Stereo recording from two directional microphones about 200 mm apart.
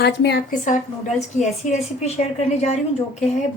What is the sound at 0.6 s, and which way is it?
Speech, 35° left (ahead or behind).